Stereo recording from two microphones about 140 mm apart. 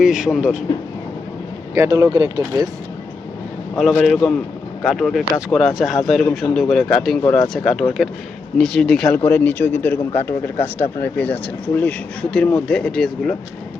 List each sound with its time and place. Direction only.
0.0 s speech: 5° right (ahead or behind)
1.7 s speech: 20° right (ahead or behind)
3.8 s speech: centre (ahead or behind)